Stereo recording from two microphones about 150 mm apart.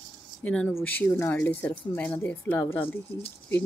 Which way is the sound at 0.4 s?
10° left (ahead or behind).